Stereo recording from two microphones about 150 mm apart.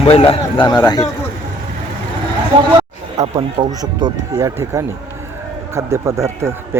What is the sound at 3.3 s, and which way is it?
Speech, 25° right (ahead or behind).